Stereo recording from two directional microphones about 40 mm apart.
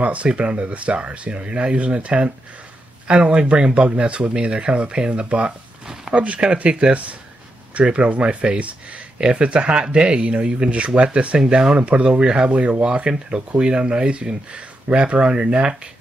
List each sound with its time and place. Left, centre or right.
0.0 s speech: right
11.3 s speech: right